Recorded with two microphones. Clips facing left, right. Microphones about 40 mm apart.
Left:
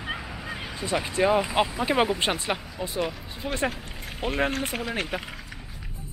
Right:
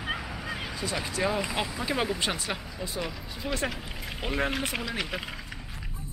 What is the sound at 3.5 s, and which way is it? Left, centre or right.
Speech, left.